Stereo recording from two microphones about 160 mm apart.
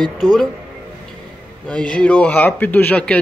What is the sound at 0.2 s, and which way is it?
Speech, 5° right (ahead or behind).